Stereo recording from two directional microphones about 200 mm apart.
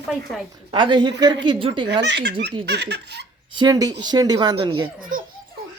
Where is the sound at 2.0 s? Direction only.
60° right (ahead or behind).